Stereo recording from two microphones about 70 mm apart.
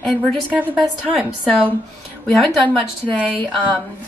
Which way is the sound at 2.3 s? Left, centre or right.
Centre.